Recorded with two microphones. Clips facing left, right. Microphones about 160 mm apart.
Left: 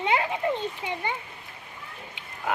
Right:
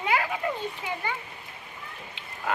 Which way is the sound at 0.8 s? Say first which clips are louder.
Left 1 dB; 20° left (ahead or behind).